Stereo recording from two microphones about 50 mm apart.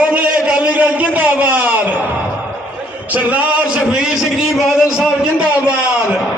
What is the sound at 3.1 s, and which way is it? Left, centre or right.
Speech, right.